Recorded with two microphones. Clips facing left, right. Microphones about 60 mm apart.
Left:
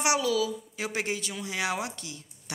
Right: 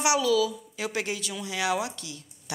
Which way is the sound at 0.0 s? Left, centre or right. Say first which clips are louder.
Right 3 dB; left.